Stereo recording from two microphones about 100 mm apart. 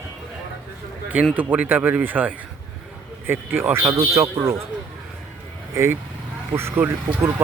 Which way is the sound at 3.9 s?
35° right (ahead or behind).